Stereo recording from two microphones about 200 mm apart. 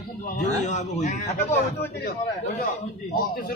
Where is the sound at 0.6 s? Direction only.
35° left (ahead or behind).